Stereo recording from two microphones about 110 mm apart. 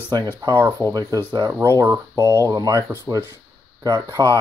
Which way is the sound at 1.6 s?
25° right (ahead or behind).